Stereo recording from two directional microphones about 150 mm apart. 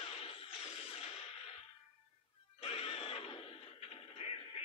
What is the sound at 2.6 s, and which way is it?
Music, 40° left (ahead or behind).